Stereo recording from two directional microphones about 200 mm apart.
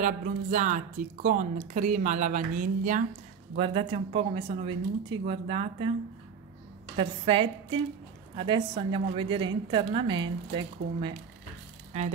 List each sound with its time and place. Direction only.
0.0 s speech: 40° right (ahead or behind)
3.5 s a woman's voice: 30° right (ahead or behind)
7.0 s a woman's voice: 25° right (ahead or behind)